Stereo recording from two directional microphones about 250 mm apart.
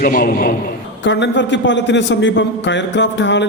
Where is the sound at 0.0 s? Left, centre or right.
Left.